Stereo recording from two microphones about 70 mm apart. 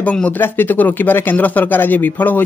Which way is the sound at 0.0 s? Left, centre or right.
Centre.